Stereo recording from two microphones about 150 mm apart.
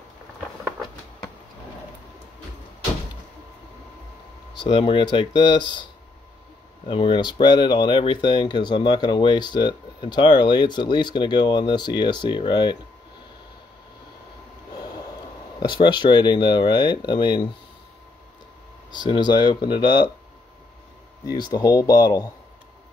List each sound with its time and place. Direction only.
4.6 s speech: 30° left (ahead or behind)
6.9 s speech: 35° left (ahead or behind)
15.6 s speech: 30° left (ahead or behind)
18.9 s speech: 30° left (ahead or behind)
21.3 s speech: 25° left (ahead or behind)